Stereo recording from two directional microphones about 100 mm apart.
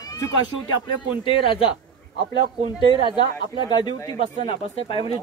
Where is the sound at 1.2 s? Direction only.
60° left (ahead or behind).